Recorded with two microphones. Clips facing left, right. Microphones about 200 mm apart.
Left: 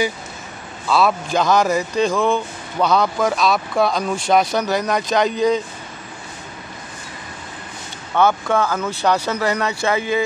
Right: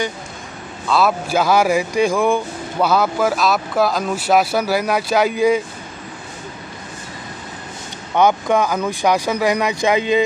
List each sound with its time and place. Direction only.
0.8 s speech: centre (ahead or behind)
8.1 s speech: 15° right (ahead or behind)